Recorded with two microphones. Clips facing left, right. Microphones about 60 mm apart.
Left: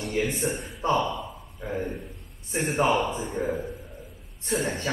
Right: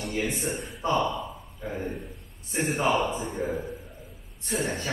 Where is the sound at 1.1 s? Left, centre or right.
Centre.